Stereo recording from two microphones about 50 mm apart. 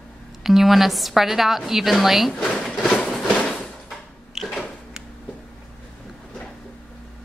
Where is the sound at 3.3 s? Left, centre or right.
Centre.